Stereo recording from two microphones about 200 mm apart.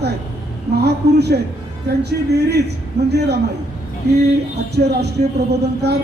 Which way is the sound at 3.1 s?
55° right (ahead or behind).